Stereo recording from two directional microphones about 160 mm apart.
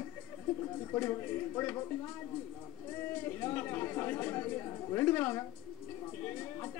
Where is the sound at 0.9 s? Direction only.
15° left (ahead or behind).